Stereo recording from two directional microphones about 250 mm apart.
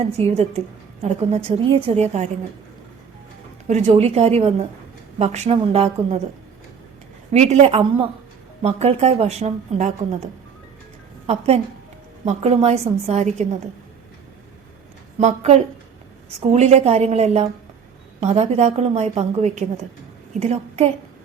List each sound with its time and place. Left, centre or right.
0.0 s a woman's voice: right
3.7 s a woman's voice: right
7.3 s a woman's voice: right
11.3 s a woman's voice: right
15.2 s a woman's voice: right